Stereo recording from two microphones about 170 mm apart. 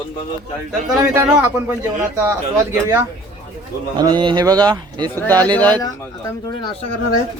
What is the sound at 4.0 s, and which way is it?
Speech, 25° right (ahead or behind).